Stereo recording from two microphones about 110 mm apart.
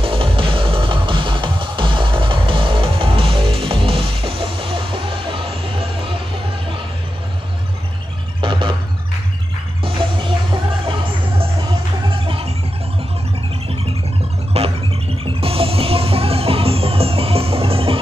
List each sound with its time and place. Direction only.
0.0 s music: 55° right (ahead or behind)
8.4 s music: 50° right (ahead or behind)
9.8 s music: 50° right (ahead or behind)
14.5 s music: 65° right (ahead or behind)